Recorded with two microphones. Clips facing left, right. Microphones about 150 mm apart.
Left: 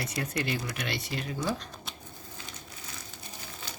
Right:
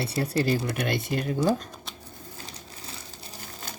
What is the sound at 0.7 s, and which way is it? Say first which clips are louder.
Speech: right 7 dB; 55° right (ahead or behind).